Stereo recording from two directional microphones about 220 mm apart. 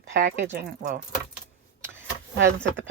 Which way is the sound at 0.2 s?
40° right (ahead or behind).